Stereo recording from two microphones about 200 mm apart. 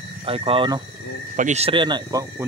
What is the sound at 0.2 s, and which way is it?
Speech, 30° right (ahead or behind).